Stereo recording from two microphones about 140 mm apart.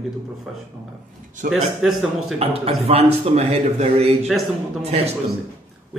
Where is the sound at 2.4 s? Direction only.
45° right (ahead or behind).